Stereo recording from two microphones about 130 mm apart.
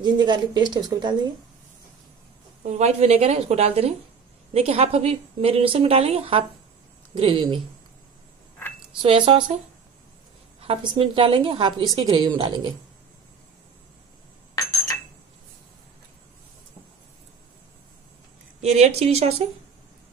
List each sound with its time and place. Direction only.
0.0 s a woman's voice: 35° right (ahead or behind)
2.6 s a woman's voice: 60° right (ahead or behind)
9.0 s a woman's voice: 45° right (ahead or behind)
10.6 s a woman's voice: 45° right (ahead or behind)
11.9 s a woman's voice: 30° right (ahead or behind)
18.6 s a woman's voice: 55° right (ahead or behind)